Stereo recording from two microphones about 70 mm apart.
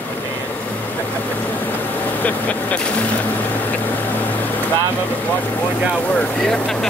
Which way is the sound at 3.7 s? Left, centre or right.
Left.